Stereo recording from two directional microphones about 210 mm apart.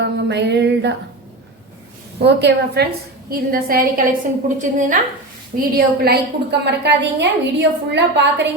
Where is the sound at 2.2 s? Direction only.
50° right (ahead or behind).